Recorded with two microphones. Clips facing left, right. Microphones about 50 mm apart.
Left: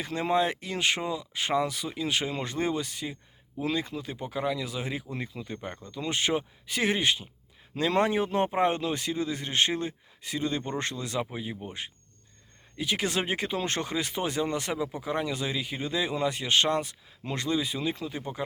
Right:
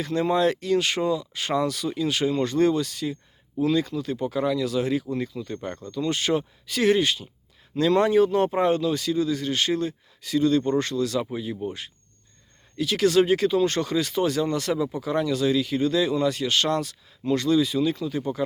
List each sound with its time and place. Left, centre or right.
0.0 s speech: left